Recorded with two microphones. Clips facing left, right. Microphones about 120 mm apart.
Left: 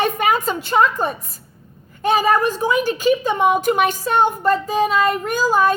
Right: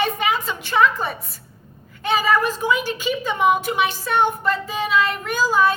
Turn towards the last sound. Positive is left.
turn(degrees=45)  # may be behind; listen again after turning